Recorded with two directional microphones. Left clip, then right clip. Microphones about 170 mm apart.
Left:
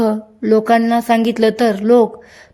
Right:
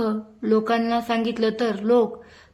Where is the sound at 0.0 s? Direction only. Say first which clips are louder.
Left 8 dB; 35° left (ahead or behind).